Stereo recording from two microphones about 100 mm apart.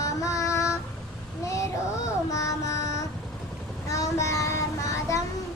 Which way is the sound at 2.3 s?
35° left (ahead or behind).